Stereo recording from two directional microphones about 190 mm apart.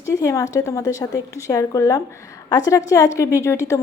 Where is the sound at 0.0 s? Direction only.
15° left (ahead or behind).